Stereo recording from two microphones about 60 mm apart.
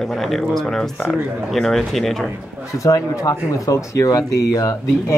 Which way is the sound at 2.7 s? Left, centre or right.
Left.